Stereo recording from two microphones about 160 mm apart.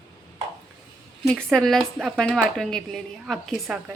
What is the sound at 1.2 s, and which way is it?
Speech, 5° left (ahead or behind).